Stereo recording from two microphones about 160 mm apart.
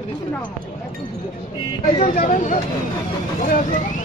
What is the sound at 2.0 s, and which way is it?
Speech, 55° left (ahead or behind).